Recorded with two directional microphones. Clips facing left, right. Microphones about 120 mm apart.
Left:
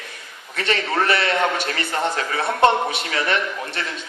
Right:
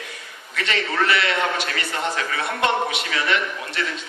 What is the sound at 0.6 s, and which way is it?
A man's voice, 40° left (ahead or behind).